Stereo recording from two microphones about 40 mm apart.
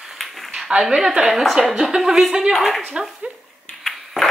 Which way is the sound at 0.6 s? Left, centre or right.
Centre.